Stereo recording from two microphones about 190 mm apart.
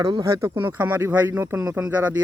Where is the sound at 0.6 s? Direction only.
10° right (ahead or behind).